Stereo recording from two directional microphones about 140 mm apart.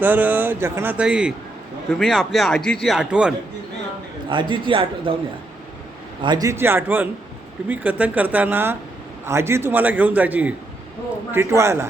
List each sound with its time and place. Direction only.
0.0 s a man's voice: 10° right (ahead or behind)
4.3 s a man's voice: 35° right (ahead or behind)
6.2 s a man's voice: 25° right (ahead or behind)